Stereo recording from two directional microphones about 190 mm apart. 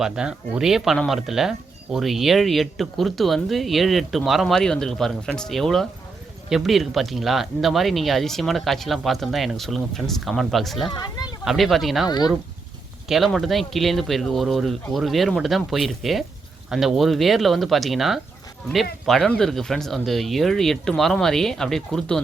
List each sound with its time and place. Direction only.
0.0 s speech: 5° right (ahead or behind)
10.9 s a sound: 20° left (ahead or behind)
11.4 s speech: centre (ahead or behind)
12.0 s speech: 20° left (ahead or behind)
13.1 s speech: centre (ahead or behind)